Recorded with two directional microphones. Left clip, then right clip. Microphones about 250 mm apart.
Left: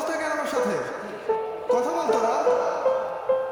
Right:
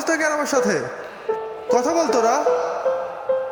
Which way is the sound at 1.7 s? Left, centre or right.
Right.